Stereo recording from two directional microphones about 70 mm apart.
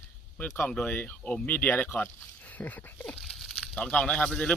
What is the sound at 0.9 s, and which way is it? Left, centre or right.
Speech, left.